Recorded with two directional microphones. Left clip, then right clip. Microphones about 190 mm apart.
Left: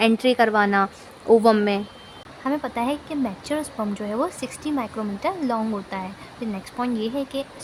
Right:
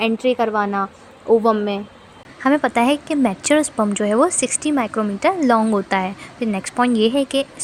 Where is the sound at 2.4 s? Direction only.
30° right (ahead or behind).